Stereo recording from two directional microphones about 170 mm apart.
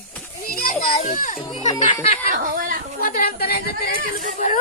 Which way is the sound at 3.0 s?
60° left (ahead or behind).